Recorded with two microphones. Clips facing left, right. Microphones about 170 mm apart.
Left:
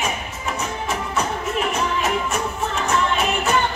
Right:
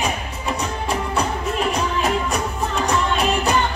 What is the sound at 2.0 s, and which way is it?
Music, 35° right (ahead or behind).